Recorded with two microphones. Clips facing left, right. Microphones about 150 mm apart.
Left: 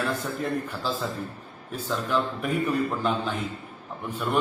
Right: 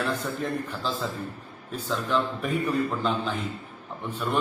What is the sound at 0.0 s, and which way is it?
A man's voice, 5° left (ahead or behind).